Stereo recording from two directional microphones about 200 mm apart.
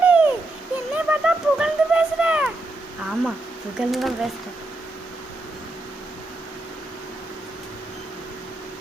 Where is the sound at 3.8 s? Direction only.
Centre (ahead or behind).